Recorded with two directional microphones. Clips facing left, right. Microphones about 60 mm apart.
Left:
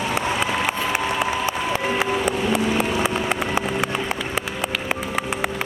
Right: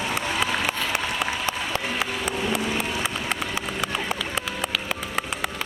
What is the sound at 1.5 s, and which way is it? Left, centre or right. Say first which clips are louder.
Music: left 4 dB; centre.